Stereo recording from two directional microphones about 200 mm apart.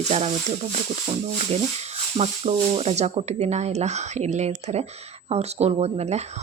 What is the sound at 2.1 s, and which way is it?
Speech, 30° right (ahead or behind).